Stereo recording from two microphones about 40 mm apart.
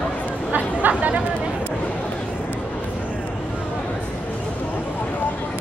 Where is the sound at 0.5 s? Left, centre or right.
Right.